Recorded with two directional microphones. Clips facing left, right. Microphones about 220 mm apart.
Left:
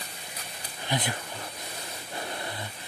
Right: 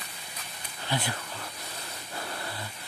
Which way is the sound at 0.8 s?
20° left (ahead or behind).